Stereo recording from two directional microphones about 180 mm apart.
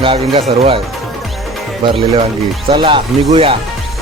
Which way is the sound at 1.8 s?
30° right (ahead or behind).